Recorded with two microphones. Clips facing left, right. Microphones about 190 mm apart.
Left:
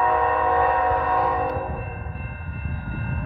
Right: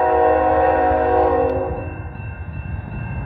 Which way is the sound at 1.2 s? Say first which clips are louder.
Right 8 dB; 25° right (ahead or behind).